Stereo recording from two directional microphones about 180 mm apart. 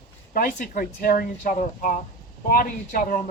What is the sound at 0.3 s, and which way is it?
Speech, 50° left (ahead or behind).